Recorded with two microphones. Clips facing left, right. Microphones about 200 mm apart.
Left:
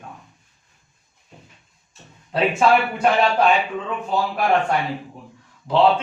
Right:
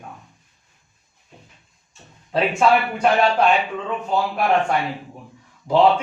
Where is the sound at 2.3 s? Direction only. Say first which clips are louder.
Even; centre (ahead or behind).